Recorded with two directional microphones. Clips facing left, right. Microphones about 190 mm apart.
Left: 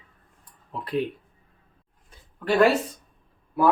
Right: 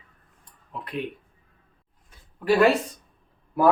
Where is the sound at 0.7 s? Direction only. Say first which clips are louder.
Left 5 dB; 35° left (ahead or behind).